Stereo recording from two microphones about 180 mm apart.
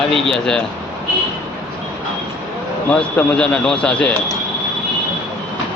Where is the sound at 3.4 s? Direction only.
5° left (ahead or behind).